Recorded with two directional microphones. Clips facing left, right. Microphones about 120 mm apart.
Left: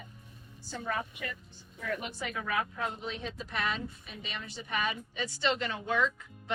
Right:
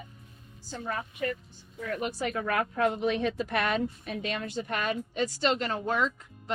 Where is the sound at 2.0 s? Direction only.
45° right (ahead or behind).